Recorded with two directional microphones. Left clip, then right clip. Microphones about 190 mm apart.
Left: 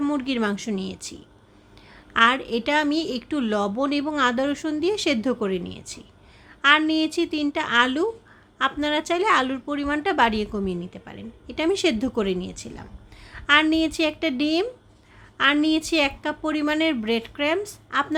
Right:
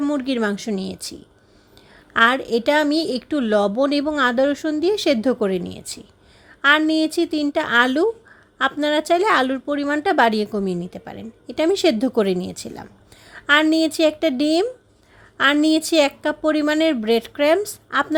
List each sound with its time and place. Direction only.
0.0 s a woman's voice: 15° right (ahead or behind)
2.1 s a woman's voice: 25° right (ahead or behind)